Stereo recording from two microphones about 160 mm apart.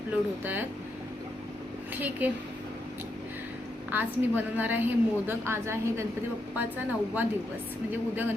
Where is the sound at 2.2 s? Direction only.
10° right (ahead or behind).